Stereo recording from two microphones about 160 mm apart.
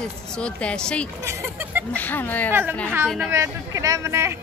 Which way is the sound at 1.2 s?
10° right (ahead or behind).